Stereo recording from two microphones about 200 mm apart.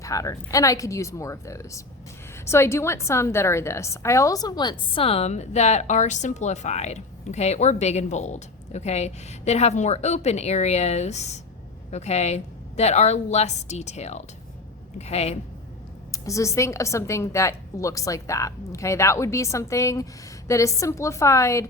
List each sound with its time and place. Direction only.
0.0 s a woman's voice: 15° left (ahead or behind); by 15.4 s 30° left (ahead or behind)
16.1 s a woman's voice: 15° left (ahead or behind)